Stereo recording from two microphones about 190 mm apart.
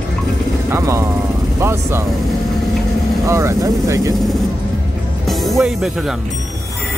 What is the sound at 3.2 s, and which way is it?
Speech, 15° right (ahead or behind).